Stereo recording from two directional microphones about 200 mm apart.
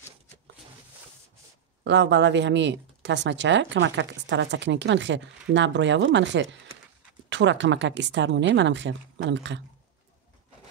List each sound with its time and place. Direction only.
1.9 s speech: 60° right (ahead or behind)